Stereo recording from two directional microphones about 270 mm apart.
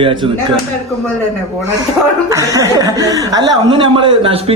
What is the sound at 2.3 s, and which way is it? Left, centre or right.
A man's voice, centre.